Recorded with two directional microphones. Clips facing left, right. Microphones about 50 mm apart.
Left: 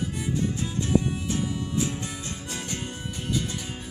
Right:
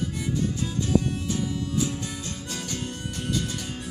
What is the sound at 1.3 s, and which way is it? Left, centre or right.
Music, left.